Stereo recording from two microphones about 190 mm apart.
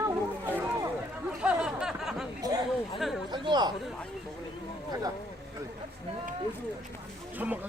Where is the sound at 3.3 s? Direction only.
25° right (ahead or behind).